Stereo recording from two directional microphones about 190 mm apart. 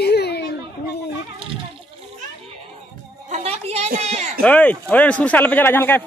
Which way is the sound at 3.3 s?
35° right (ahead or behind).